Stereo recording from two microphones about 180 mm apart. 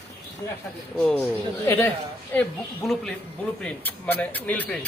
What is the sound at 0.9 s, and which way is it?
A woman's voice, 5° left (ahead or behind).